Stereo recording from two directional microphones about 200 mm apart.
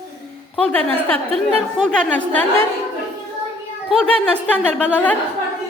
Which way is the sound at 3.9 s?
5° left (ahead or behind).